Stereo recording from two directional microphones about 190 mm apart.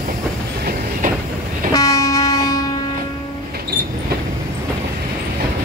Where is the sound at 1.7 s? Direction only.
15° left (ahead or behind).